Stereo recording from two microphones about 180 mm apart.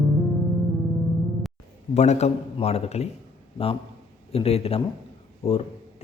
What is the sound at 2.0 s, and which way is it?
A man's voice, 40° left (ahead or behind).